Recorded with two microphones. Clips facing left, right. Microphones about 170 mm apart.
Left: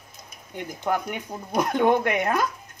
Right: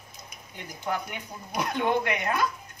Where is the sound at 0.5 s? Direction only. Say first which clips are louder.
Left 5 dB; 50° left (ahead or behind).